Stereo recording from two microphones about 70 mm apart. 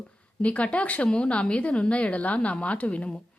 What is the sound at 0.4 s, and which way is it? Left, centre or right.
A woman's voice, centre.